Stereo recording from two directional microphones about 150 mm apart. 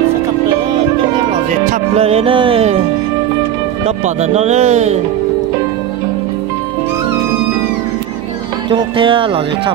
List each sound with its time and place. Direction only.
1.7 s music: 40° right (ahead or behind)
3.8 s speech: 45° right (ahead or behind)
8.6 s music: 35° right (ahead or behind)